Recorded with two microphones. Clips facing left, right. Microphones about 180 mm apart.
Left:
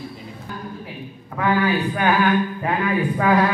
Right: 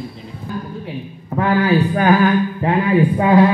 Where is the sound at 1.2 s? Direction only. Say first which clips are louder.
Right 4 dB; 35° right (ahead or behind).